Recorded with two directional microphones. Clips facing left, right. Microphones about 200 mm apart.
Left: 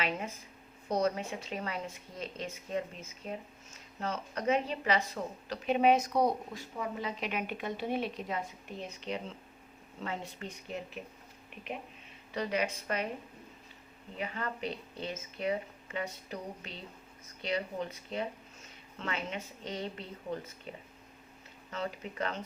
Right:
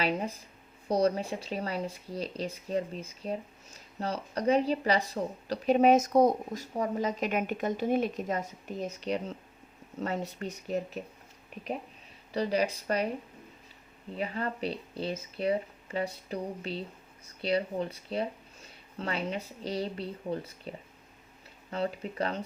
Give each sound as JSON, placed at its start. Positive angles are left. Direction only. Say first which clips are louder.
{"t": 0.0, "sound": "speech", "louder": "right 5 dB", "side_deg": -35}
{"t": 12.3, "sound": "speech", "louder": "right 4 dB", "side_deg": -35}
{"t": 14.2, "sound": "speech", "louder": "right 4 dB", "side_deg": -35}